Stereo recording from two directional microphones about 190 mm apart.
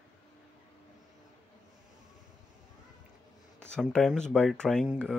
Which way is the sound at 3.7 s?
5° left (ahead or behind).